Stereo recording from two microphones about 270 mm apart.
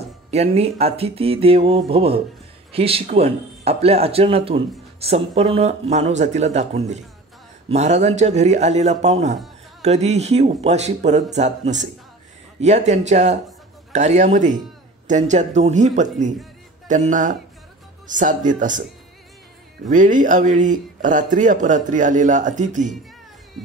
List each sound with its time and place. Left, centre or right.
0.3 s speech: right
19.9 s speech: right